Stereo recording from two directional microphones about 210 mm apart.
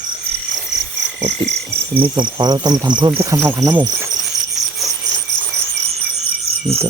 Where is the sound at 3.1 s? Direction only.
10° right (ahead or behind).